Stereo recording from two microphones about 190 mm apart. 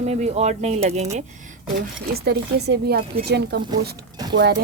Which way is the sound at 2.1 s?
60° right (ahead or behind).